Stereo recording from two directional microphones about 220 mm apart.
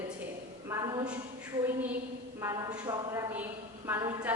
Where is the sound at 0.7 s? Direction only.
15° right (ahead or behind).